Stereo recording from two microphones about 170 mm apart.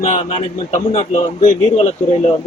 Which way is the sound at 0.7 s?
45° left (ahead or behind).